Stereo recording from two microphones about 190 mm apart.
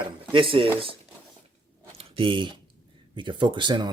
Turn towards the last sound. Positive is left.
turn(degrees=-25)  # may be behind; listen again after turning